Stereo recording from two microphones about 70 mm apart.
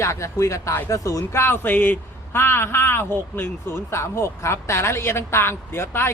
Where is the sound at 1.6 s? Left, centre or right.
Left.